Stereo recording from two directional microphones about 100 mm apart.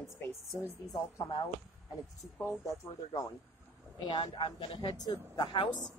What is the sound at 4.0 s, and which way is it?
Speech, 45° left (ahead or behind).